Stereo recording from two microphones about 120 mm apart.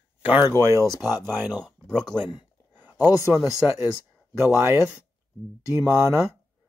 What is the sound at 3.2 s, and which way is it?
Speech, 20° right (ahead or behind).